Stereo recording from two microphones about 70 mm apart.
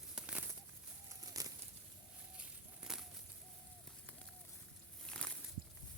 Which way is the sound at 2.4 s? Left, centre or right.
Centre.